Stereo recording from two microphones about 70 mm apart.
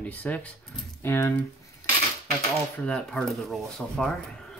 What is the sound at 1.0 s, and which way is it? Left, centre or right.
Speech, left.